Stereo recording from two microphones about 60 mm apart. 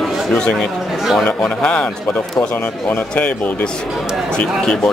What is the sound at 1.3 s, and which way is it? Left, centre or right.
Speech, centre.